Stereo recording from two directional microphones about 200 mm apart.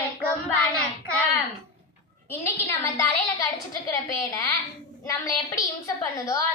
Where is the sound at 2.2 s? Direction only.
10° left (ahead or behind).